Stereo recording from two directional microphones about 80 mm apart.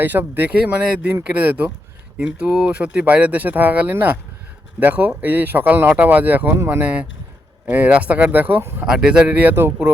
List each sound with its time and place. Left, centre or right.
0.0 s speech: right
8.9 s speech: centre; by 9.7 s right